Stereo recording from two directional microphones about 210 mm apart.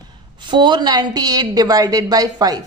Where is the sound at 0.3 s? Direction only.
20° right (ahead or behind).